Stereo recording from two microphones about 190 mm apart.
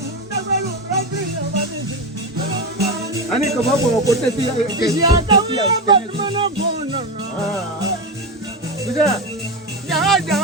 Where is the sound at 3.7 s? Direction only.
15° right (ahead or behind).